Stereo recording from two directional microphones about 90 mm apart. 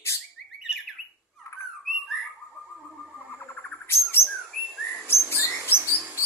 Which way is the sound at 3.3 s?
20° left (ahead or behind).